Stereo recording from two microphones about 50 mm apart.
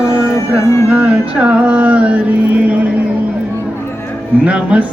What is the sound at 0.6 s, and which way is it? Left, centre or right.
Music, left.